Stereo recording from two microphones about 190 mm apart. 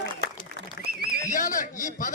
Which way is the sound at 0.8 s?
55° right (ahead or behind).